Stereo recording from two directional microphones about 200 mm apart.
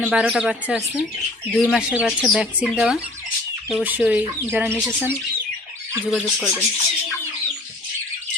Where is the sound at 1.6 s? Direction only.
5° right (ahead or behind).